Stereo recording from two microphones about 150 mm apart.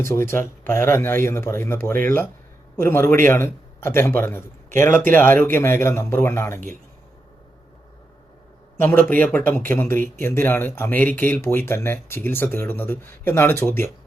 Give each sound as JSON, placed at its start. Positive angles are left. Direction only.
{"t": 0.0, "sound": "speech", "side_deg": 15}
{"t": 8.8, "sound": "speech", "side_deg": 15}